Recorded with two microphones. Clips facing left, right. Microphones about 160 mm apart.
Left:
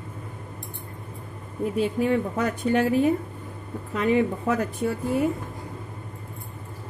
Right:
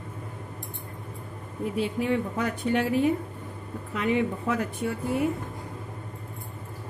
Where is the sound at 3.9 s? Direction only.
40° left (ahead or behind).